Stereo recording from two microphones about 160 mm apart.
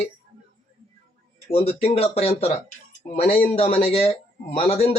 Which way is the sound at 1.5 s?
40° left (ahead or behind).